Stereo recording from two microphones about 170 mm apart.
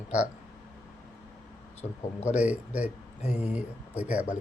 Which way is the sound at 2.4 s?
10° right (ahead or behind).